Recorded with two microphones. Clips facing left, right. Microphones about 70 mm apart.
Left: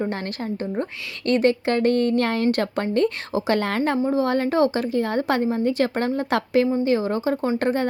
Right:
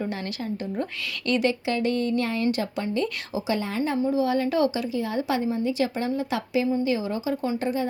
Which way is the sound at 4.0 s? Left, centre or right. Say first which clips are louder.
Left 2 dB; left.